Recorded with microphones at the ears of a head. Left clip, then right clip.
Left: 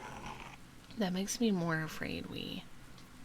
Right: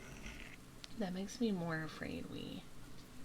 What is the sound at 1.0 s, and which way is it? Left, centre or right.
Speech, left.